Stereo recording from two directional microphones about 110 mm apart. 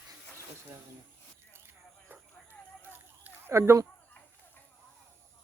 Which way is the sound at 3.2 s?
20° right (ahead or behind).